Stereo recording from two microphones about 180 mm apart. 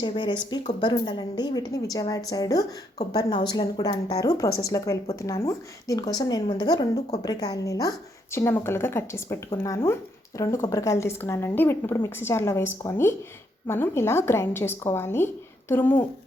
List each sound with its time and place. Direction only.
0.0 s a woman's voice: 25° left (ahead or behind)